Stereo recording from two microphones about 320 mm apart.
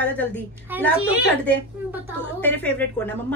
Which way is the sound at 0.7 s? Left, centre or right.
Centre.